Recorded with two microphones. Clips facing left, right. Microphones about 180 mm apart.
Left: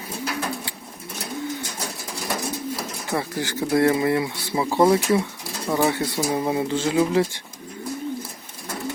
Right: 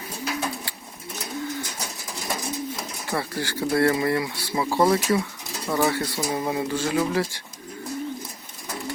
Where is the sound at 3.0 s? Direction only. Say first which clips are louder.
Left 2 dB; 20° left (ahead or behind).